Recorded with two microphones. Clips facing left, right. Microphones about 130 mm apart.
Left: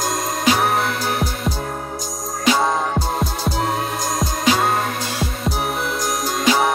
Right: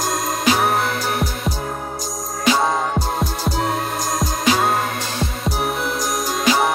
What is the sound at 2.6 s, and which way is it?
Music, centre (ahead or behind).